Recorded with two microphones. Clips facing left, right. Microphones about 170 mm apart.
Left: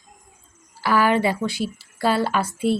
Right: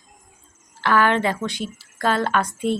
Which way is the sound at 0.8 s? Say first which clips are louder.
Even; 10° left (ahead or behind).